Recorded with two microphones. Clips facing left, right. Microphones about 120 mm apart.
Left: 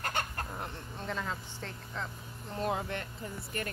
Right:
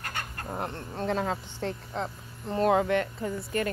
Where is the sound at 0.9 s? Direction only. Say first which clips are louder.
Right 9 dB; 55° right (ahead or behind).